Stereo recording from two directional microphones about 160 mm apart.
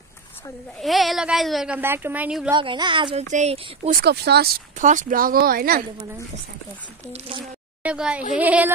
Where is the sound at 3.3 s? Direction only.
45° right (ahead or behind).